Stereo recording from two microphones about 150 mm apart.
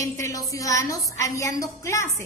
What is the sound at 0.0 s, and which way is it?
A woman's voice, 20° left (ahead or behind).